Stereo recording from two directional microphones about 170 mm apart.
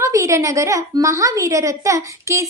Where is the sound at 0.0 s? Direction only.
20° right (ahead or behind).